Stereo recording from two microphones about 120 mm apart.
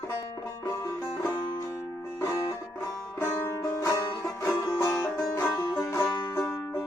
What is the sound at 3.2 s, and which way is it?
Music, 20° left (ahead or behind).